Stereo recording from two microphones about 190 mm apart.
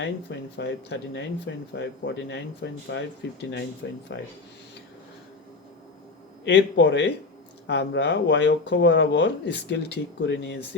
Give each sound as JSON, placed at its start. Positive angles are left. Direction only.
{"t": 0.0, "sound": "speech", "side_deg": 65}
{"t": 6.4, "sound": "a man's voice", "side_deg": 65}